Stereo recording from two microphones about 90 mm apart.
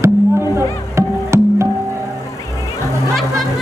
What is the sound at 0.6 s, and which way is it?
Music, 30° right (ahead or behind).